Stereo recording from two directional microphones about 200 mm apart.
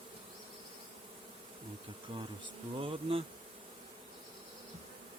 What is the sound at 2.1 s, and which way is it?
Bee, 25° right (ahead or behind).